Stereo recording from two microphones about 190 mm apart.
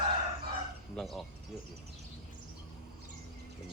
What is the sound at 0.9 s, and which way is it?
Speech, centre (ahead or behind).